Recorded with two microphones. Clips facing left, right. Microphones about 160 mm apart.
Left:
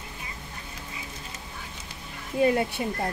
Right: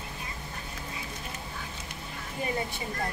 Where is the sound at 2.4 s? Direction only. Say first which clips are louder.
Left 10 dB; 70° left (ahead or behind).